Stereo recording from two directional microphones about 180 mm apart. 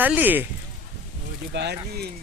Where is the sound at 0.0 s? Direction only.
10° right (ahead or behind).